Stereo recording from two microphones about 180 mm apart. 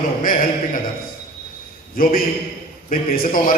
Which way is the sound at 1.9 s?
50° left (ahead or behind).